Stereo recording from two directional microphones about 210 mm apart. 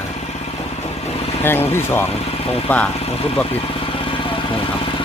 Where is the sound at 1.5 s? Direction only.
10° left (ahead or behind).